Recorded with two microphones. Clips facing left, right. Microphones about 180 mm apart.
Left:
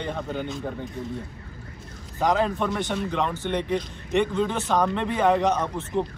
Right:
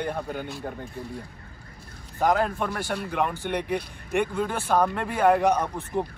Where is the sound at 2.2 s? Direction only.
5° right (ahead or behind).